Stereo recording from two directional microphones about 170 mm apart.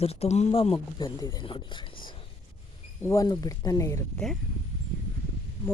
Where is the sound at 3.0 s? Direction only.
20° left (ahead or behind).